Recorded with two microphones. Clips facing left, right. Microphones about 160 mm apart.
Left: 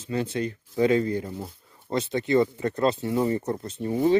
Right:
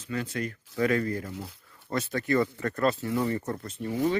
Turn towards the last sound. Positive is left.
turn(degrees=25)  # may be behind; listen again after turning